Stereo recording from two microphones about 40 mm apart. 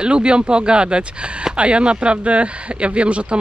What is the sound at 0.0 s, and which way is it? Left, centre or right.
Speech, right.